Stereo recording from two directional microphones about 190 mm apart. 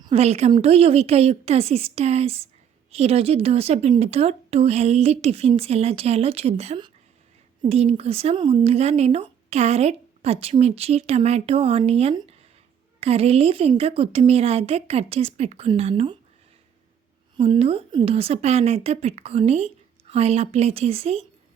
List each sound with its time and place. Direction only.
0.0 s speech: 30° right (ahead or behind)
17.3 s speech: 30° right (ahead or behind)